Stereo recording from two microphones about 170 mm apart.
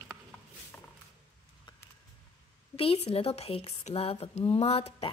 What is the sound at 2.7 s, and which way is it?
A woman's voice, 35° left (ahead or behind).